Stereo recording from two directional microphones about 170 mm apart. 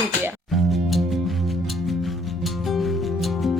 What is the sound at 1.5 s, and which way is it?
Music, centre (ahead or behind).